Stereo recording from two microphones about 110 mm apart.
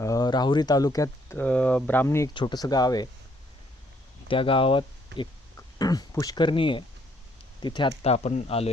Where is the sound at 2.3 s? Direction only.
45° left (ahead or behind).